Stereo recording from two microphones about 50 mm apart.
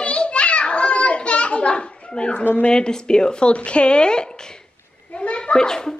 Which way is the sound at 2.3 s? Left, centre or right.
Left.